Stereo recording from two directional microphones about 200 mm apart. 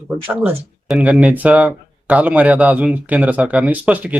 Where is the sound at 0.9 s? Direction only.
5° right (ahead or behind).